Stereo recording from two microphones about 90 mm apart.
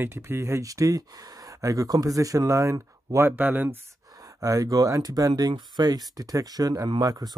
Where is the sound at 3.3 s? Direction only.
20° right (ahead or behind).